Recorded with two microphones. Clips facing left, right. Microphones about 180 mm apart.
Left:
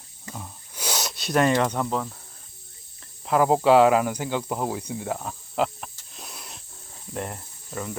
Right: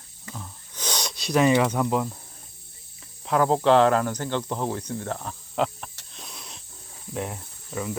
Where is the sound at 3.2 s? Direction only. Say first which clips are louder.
Left 1 dB; 5° left (ahead or behind).